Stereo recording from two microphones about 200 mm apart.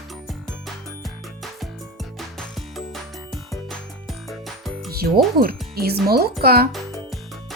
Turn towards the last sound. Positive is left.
turn(degrees=-50)  # may be behind; listen again after turning